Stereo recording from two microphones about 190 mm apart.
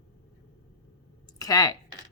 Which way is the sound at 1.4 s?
20° left (ahead or behind).